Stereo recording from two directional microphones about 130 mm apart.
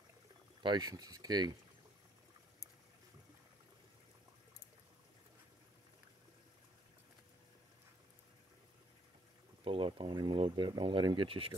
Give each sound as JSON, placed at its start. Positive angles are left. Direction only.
{"t": 0.6, "sound": "speech", "side_deg": -35}
{"t": 9.7, "sound": "speech", "side_deg": -45}